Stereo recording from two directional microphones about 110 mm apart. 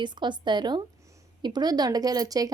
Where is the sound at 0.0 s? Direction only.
45° right (ahead or behind).